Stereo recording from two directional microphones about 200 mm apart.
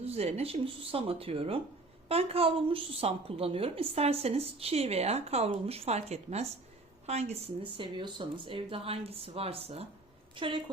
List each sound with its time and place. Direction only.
0.0 s a woman's voice: 30° right (ahead or behind)